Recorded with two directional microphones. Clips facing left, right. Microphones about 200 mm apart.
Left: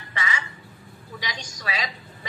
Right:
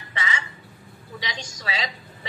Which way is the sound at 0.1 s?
25° right (ahead or behind).